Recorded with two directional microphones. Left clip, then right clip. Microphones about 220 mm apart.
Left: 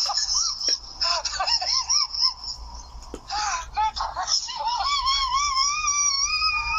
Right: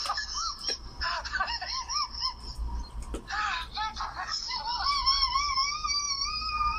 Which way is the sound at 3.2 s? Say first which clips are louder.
Left 4 dB; 25° left (ahead or behind).